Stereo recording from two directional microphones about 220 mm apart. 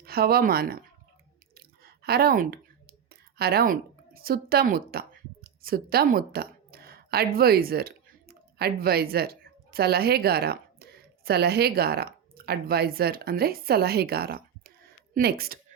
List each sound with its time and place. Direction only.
0.0 s speech: 45° right (ahead or behind)
1.5 s a sound: 45° right (ahead or behind)
11.3 s speech: 45° right (ahead or behind)